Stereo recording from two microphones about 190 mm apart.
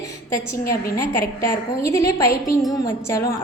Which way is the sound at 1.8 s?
15° left (ahead or behind).